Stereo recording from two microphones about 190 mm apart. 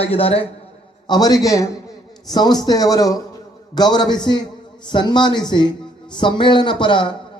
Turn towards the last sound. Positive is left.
turn(degrees=25)  # may be behind; listen again after turning